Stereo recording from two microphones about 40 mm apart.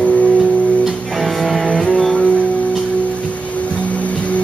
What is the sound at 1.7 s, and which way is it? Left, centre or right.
Music, centre.